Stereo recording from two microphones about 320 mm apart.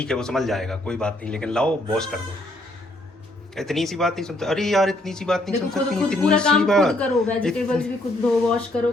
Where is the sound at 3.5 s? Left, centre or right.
Centre.